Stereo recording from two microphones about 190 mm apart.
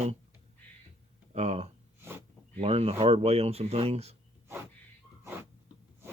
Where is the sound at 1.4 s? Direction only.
35° right (ahead or behind).